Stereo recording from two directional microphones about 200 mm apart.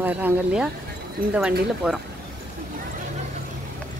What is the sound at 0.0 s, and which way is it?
Speech, 10° right (ahead or behind).